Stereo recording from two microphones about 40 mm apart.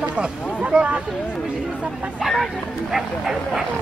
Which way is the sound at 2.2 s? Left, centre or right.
Centre.